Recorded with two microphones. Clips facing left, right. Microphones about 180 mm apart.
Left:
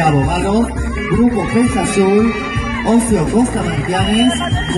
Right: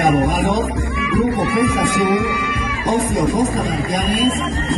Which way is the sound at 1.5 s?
55° left (ahead or behind).